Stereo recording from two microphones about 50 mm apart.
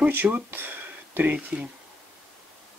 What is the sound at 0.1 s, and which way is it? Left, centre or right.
Speech, right.